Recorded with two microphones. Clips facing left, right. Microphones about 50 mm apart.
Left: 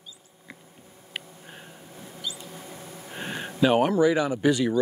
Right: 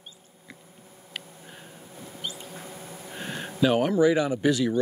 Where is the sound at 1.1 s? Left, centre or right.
Centre.